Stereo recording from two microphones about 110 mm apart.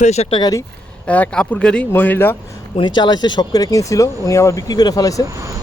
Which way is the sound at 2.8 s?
45° left (ahead or behind).